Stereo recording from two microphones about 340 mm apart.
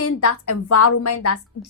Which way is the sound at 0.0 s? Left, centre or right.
Left.